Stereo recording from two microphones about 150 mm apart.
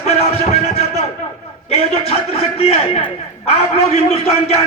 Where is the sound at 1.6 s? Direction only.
45° left (ahead or behind).